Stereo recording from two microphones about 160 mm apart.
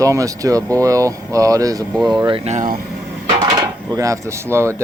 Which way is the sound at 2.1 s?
30° right (ahead or behind).